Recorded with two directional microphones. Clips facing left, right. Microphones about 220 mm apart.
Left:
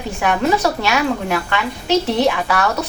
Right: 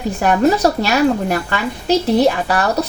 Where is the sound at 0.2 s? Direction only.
40° right (ahead or behind).